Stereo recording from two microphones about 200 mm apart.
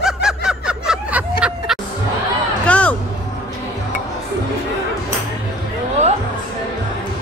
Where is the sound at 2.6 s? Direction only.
5° left (ahead or behind).